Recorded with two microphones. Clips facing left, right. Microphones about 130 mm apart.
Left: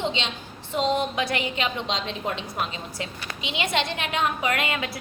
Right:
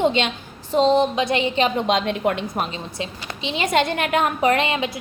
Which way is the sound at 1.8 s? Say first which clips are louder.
Right 9 dB; 55° right (ahead or behind).